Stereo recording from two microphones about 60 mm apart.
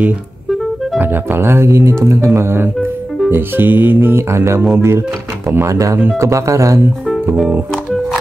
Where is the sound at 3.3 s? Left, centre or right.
Right.